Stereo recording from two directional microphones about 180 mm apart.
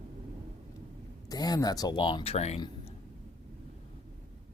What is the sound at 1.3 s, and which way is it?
Speech, 20° left (ahead or behind).